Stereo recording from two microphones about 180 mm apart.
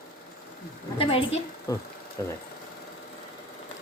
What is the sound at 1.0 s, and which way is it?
Speech, 30° left (ahead or behind).